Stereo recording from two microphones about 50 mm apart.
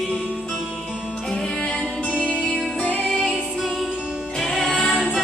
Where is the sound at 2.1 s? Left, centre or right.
Right.